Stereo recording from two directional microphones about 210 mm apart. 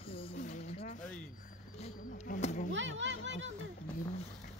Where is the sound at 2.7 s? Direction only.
60° right (ahead or behind).